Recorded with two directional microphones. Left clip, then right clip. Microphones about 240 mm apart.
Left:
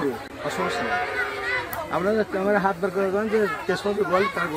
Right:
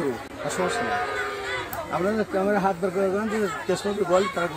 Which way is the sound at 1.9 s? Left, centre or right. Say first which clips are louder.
Left 2 dB; right.